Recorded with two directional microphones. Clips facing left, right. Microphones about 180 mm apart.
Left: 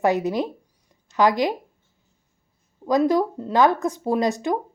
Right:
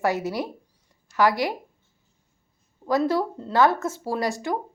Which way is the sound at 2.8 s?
15° left (ahead or behind).